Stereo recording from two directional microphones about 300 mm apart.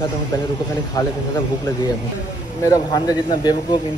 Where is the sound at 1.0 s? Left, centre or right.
Centre.